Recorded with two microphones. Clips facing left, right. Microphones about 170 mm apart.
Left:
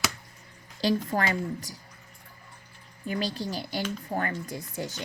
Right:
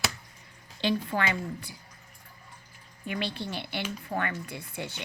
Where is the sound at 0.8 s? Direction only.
40° left (ahead or behind).